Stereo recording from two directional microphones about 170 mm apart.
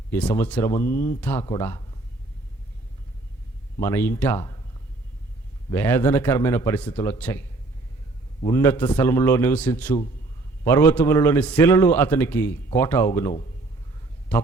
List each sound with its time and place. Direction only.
0.1 s a man's voice: 10° left (ahead or behind)
3.8 s a man's voice: 15° left (ahead or behind)
5.7 s a man's voice: 10° left (ahead or behind)
8.4 s a man's voice: 15° left (ahead or behind)